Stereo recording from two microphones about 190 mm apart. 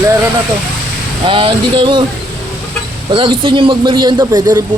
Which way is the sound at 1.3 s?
25° right (ahead or behind).